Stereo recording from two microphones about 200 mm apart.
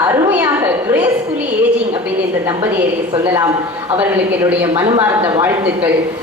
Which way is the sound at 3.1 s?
20° right (ahead or behind).